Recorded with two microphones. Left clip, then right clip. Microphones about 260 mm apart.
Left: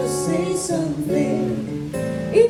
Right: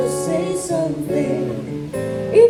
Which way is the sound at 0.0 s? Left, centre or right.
Right.